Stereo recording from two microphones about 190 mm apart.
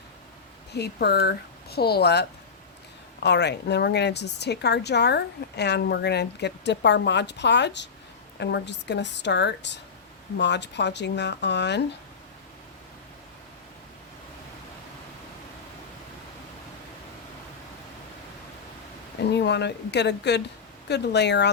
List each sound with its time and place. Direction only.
0.7 s a woman's voice: 60° left (ahead or behind)
3.2 s a woman's voice: 60° left (ahead or behind)
19.3 s a woman's voice: 65° left (ahead or behind)